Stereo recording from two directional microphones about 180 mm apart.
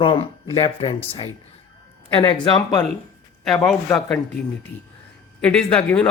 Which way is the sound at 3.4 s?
5° left (ahead or behind).